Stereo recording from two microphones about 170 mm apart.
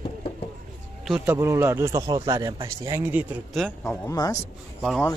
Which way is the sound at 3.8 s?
15° left (ahead or behind).